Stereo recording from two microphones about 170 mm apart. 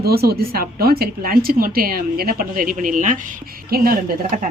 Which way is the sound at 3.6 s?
60° right (ahead or behind).